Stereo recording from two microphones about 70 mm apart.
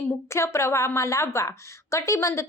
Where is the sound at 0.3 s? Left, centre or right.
Left.